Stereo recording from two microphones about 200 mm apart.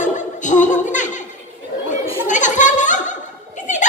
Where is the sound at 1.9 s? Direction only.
40° left (ahead or behind).